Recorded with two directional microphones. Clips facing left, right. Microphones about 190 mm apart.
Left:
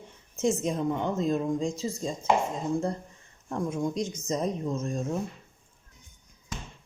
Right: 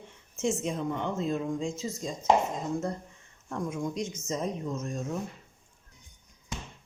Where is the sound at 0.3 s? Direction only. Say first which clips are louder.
Left 3 dB; 40° left (ahead or behind).